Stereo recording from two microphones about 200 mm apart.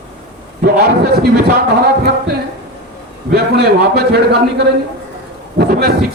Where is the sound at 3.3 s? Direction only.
55° right (ahead or behind).